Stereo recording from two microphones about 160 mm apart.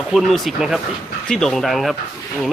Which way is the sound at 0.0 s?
Centre (ahead or behind).